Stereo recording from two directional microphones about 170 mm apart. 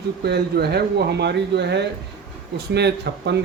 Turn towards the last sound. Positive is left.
turn(degrees=-80)